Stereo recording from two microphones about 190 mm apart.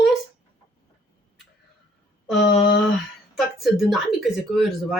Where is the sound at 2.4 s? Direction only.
60° left (ahead or behind).